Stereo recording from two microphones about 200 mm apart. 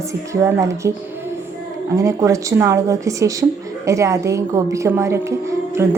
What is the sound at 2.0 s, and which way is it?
A woman's voice, 15° right (ahead or behind).